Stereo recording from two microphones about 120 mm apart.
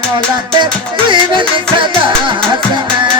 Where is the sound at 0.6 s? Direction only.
40° right (ahead or behind).